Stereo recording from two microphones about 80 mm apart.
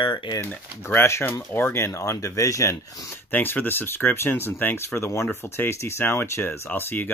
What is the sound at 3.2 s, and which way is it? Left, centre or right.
Speech, left.